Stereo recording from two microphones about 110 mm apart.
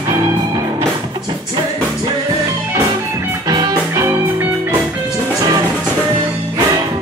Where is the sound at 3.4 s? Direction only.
35° right (ahead or behind).